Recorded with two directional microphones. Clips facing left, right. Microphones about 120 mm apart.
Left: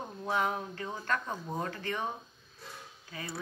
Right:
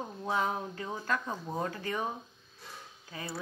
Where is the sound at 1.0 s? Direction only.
10° right (ahead or behind).